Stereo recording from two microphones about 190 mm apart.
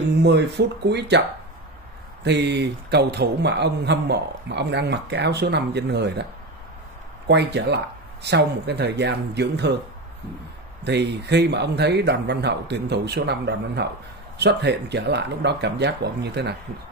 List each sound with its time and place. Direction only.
0.2 s a man's voice: 65° right (ahead or behind)
2.2 s a man's voice: 65° right (ahead or behind)
7.2 s a man's voice: 60° right (ahead or behind)
10.8 s a man's voice: 60° right (ahead or behind)